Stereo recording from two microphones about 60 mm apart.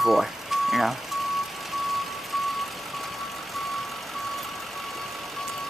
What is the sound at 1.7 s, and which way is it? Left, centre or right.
Vehicle, centre.